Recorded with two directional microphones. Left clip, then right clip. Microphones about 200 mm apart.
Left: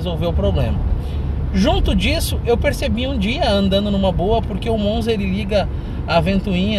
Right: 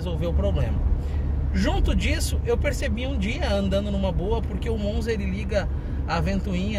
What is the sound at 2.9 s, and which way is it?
Speech, 10° left (ahead or behind).